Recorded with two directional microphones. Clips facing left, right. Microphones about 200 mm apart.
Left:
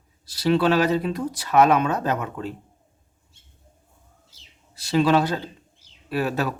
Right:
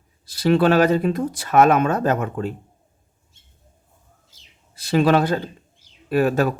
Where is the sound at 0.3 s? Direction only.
50° right (ahead or behind).